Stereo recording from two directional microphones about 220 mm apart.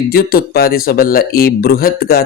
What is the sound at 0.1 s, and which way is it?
Speech, 45° left (ahead or behind).